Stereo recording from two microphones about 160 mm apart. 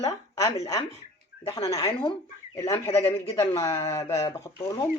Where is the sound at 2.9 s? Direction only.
35° left (ahead or behind).